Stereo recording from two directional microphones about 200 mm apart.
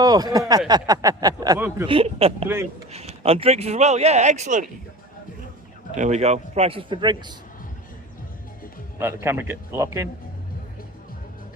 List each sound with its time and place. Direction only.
0.0 s speech: 20° right (ahead or behind)
1.9 s speech: 30° right (ahead or behind)
6.0 s speech: 35° right (ahead or behind)
9.2 s speech: 10° right (ahead or behind)